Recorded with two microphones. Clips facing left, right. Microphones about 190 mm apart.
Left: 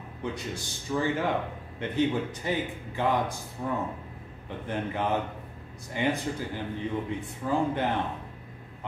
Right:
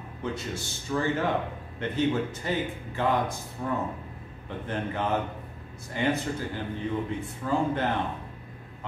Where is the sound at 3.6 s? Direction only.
10° left (ahead or behind).